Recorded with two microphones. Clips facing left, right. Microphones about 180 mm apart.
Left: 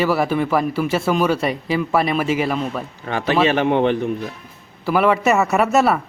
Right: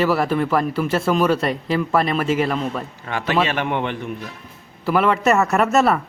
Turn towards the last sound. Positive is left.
turn(degrees=5)  # may be behind; listen again after turning